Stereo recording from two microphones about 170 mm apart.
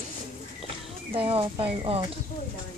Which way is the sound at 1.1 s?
35° right (ahead or behind).